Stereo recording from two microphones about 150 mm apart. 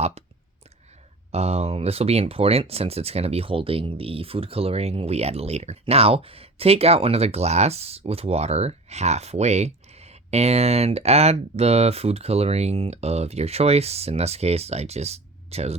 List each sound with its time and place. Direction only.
1.3 s speech: 45° right (ahead or behind)